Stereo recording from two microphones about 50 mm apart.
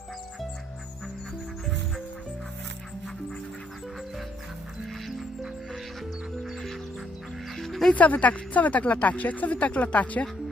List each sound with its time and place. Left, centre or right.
6.4 s music: centre
7.9 s speech: left